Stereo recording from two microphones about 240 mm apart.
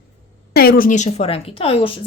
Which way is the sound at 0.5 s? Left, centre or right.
Left.